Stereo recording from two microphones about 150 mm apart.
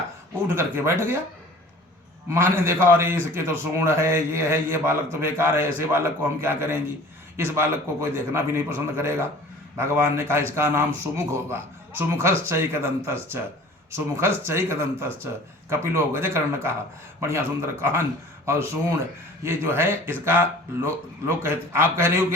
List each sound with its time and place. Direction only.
0.4 s a man's voice: 15° right (ahead or behind)
2.3 s a man's voice: 15° right (ahead or behind)